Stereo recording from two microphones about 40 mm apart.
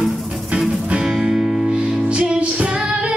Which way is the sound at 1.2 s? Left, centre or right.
Centre.